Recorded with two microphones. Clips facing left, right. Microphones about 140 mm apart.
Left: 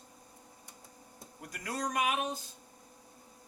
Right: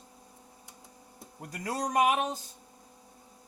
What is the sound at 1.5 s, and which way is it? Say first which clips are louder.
Speech: right 4 dB; 35° right (ahead or behind).